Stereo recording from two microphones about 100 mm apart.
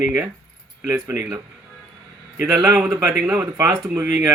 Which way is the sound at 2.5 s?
35° right (ahead or behind).